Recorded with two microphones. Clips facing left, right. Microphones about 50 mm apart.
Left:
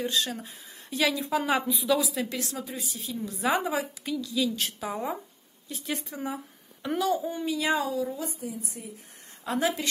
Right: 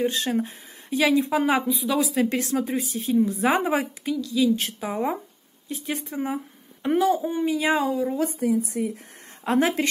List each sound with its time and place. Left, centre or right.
0.0 s speech: right
0.8 s a woman's voice: right
3.2 s speech: right
4.2 s a woman's voice: centre
4.7 s speech: centre
8.2 s a woman's voice: right
9.4 s speech: right